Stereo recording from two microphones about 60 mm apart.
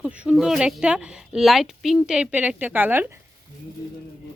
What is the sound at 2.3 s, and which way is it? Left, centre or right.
Speech, right.